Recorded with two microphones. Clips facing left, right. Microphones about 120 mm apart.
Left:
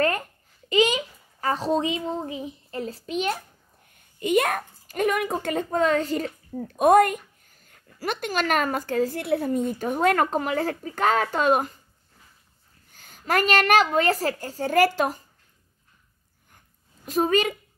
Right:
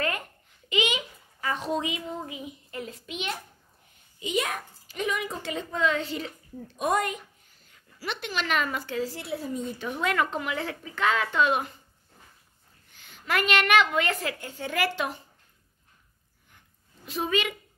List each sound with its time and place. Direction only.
0.7 s a child's voice: 35° left (ahead or behind)
4.2 s a child's voice: 55° left (ahead or behind)
12.9 s a woman's voice: 40° left (ahead or behind)
16.5 s a sound: 45° left (ahead or behind)